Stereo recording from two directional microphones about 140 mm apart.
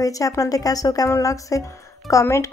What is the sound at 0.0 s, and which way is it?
A woman's voice, 25° left (ahead or behind).